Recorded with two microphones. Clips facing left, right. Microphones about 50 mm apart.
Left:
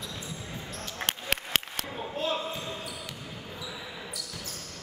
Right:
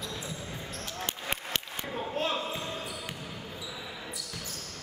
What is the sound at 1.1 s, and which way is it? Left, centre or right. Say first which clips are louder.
Applause: left 5 dB; left.